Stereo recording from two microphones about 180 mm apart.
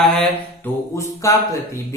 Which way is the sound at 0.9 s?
15° left (ahead or behind).